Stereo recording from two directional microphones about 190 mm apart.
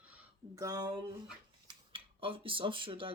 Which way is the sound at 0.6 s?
20° right (ahead or behind).